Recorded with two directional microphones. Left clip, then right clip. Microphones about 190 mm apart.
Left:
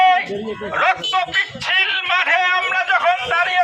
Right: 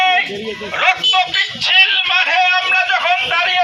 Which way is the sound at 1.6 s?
5° right (ahead or behind).